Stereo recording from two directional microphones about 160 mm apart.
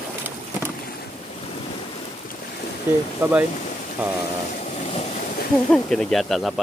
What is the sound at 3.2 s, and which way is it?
Speech, 15° right (ahead or behind).